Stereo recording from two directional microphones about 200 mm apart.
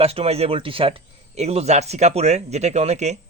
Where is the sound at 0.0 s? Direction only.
30° right (ahead or behind).